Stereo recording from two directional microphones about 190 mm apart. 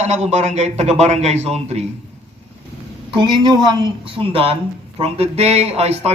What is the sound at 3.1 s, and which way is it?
A man's voice, 25° right (ahead or behind).